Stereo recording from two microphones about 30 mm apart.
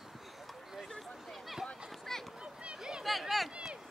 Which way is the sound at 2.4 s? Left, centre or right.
Right.